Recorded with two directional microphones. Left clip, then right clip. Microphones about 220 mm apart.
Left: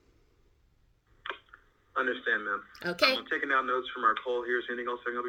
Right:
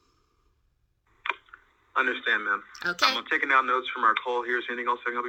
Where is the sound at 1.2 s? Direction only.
25° right (ahead or behind).